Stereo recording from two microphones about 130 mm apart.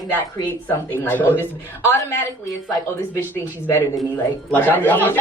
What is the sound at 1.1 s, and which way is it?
Speech, 15° left (ahead or behind).